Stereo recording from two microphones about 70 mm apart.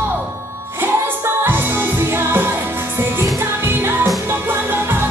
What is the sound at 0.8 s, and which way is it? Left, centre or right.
Music, right.